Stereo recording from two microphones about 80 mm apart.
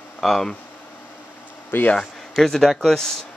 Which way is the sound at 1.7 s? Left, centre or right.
Left.